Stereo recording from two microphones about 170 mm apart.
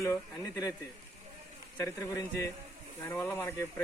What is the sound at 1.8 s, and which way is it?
Speech, 15° left (ahead or behind).